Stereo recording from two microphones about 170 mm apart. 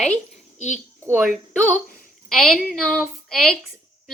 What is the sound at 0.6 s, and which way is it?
Speech, 45° left (ahead or behind).